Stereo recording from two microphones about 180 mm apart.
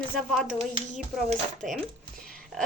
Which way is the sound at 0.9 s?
45° right (ahead or behind).